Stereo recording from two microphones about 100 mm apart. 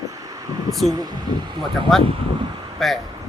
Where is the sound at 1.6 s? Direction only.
Centre (ahead or behind).